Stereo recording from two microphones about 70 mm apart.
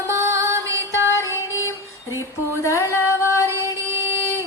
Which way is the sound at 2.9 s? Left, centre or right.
Right.